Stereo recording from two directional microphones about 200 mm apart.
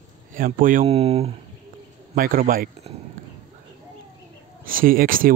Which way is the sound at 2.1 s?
45° right (ahead or behind).